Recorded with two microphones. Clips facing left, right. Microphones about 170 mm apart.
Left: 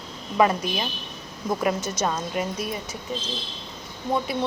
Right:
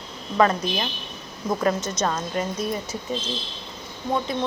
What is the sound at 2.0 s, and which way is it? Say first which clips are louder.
Speech: right 1 dB; 5° left (ahead or behind).